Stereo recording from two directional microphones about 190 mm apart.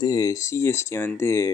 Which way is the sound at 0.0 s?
20° left (ahead or behind).